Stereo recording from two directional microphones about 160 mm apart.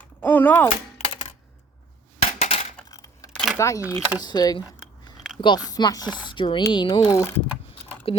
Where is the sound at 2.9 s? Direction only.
20° left (ahead or behind).